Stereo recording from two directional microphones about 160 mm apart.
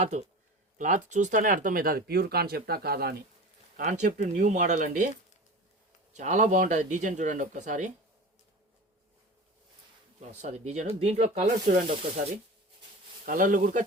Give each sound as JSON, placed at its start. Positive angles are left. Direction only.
{"t": 0.0, "sound": "speech", "side_deg": -45}
{"t": 3.8, "sound": "speech", "side_deg": -50}
{"t": 6.1, "sound": "speech", "side_deg": -50}
{"t": 10.2, "sound": "speech", "side_deg": -45}
{"t": 13.2, "sound": "speech", "side_deg": -60}